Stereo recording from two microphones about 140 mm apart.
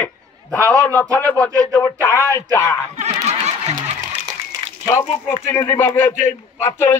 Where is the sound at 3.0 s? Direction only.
55° right (ahead or behind).